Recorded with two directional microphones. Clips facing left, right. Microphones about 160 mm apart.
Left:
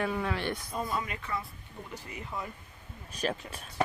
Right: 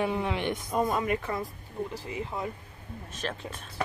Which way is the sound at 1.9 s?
25° right (ahead or behind).